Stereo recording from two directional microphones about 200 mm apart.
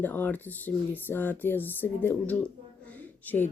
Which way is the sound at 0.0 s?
10° left (ahead or behind).